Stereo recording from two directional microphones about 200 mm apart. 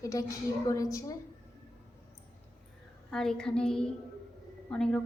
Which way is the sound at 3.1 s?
5° left (ahead or behind).